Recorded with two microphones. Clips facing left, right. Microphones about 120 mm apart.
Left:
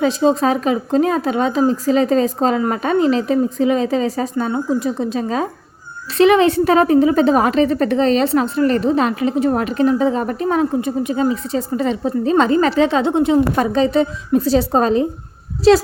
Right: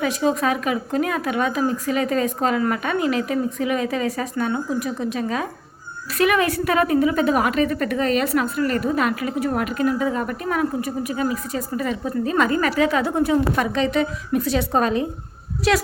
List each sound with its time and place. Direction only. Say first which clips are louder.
0.0 s a woman's voice: left 6 dB; 30° left (ahead or behind)